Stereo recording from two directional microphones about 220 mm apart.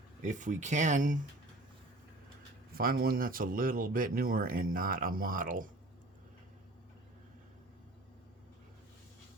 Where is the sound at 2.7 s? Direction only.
40° right (ahead or behind).